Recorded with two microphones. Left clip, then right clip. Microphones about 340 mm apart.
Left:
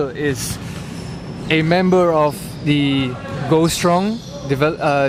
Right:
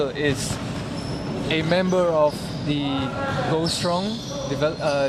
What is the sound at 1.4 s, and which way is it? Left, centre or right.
Speech, left.